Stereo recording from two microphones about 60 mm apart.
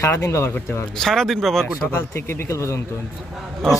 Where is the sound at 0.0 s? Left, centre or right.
Left.